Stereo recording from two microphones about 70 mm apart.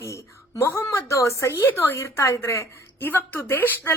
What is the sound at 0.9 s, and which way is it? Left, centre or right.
A woman's voice, left.